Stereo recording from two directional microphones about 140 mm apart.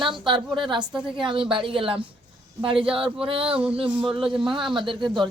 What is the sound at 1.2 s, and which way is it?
Speech, 35° right (ahead or behind).